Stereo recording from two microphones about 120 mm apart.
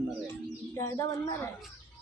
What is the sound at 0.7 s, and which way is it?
Speech, 25° left (ahead or behind).